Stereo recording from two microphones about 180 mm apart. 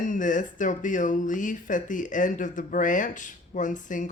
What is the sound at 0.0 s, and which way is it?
Speech, 45° left (ahead or behind).